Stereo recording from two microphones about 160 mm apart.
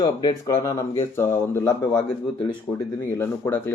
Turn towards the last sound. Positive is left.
turn(degrees=15)  # may be behind; listen again after turning